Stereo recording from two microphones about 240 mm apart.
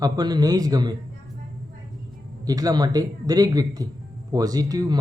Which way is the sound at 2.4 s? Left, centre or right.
Centre.